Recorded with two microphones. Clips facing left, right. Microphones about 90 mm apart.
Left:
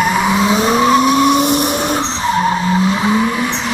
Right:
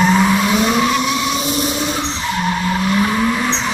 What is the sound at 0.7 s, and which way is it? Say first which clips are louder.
Vehicle: left 6 dB; 35° left (ahead or behind).